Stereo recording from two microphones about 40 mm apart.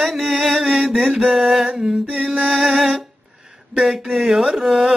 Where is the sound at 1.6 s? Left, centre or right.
Centre.